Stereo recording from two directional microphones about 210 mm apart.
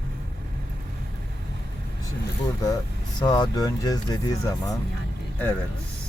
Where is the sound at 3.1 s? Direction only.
20° left (ahead or behind).